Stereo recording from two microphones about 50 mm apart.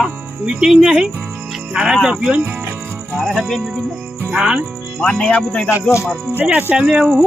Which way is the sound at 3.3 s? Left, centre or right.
Centre.